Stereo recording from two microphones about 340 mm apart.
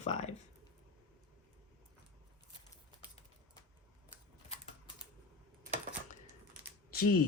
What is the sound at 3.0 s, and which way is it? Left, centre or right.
Typing, centre.